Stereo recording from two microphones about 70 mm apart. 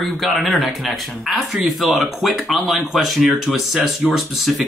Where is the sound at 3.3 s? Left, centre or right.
Right.